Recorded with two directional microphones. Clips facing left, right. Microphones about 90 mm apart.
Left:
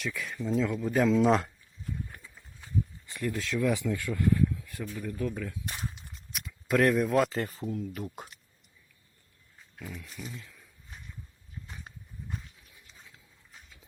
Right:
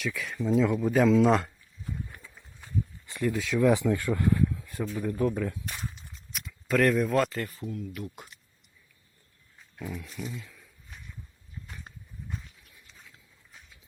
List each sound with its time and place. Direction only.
0.0 s speech: centre (ahead or behind)
3.2 s speech: 5° right (ahead or behind)
3.6 s speech: 35° right (ahead or behind)
4.4 s a sound: 25° right (ahead or behind)
5.0 s speech: 35° right (ahead or behind)
5.6 s speech: 25° left (ahead or behind)
5.9 s a sound: 5° left (ahead or behind)
7.3 s speech: 25° left (ahead or behind)
9.8 s speech: 5° right (ahead or behind)